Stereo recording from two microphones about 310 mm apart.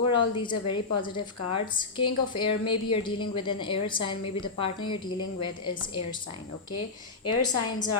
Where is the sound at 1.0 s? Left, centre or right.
Centre.